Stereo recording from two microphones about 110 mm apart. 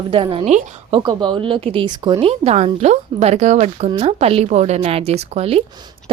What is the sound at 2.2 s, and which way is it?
Speech, 70° right (ahead or behind).